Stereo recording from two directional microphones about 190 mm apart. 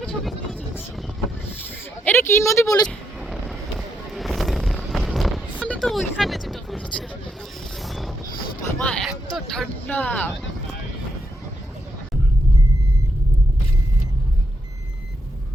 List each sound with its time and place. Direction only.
0.0 s vehicle: 5° left (ahead or behind)
2.0 s speech: 15° left (ahead or behind)
3.2 s a sound: centre (ahead or behind)
7.8 s mechanisms: centre (ahead or behind)
8.8 s speech: 5° left (ahead or behind)